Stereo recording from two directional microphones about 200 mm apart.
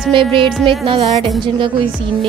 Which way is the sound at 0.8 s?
30° right (ahead or behind).